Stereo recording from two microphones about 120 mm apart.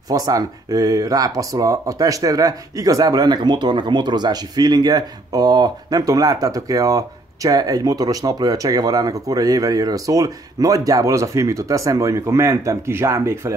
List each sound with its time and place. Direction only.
0.1 s speech: 30° right (ahead or behind)